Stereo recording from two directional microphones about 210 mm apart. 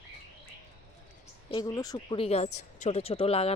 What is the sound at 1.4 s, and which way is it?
Speech, 20° left (ahead or behind).